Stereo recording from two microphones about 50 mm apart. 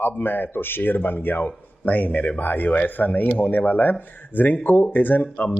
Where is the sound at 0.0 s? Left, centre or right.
Left.